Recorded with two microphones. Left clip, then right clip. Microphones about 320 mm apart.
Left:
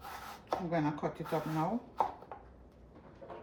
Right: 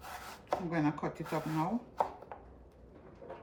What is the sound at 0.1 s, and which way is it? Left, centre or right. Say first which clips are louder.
Speech: right 1 dB; centre.